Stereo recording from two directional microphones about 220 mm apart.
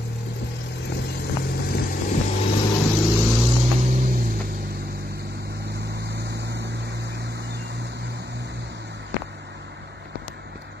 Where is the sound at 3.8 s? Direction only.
40° right (ahead or behind).